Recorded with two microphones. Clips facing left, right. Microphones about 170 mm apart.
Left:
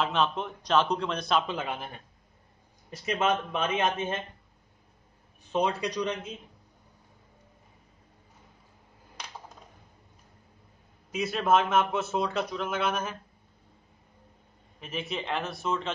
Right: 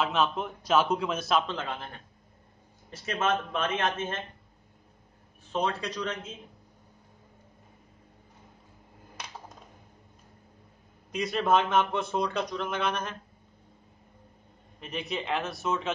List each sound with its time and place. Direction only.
0.0 s a man's voice: centre (ahead or behind)
1.5 s speech: 10° left (ahead or behind)
2.9 s speech: 15° left (ahead or behind)
5.5 s speech: 15° left (ahead or behind)
11.1 s a man's voice: 5° left (ahead or behind)
14.8 s a man's voice: centre (ahead or behind)